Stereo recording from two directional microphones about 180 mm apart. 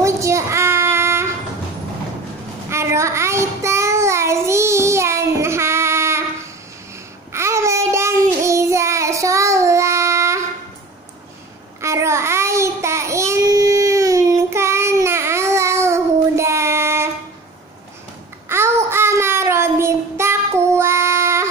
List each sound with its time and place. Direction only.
0.0 s child singing: 15° right (ahead or behind)
2.7 s child singing: 15° right (ahead or behind)
7.3 s child singing: 15° right (ahead or behind)
11.8 s child singing: 15° right (ahead or behind)
18.5 s child singing: 15° right (ahead or behind)